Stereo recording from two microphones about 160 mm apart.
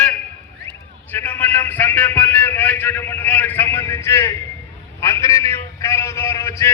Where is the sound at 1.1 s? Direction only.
10° left (ahead or behind).